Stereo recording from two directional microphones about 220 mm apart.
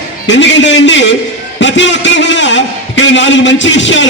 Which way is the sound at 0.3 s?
55° left (ahead or behind).